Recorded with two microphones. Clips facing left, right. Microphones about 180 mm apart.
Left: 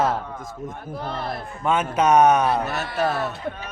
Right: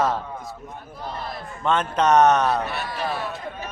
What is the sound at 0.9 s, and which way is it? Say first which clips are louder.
Speech: left 3 dB; 60° left (ahead or behind).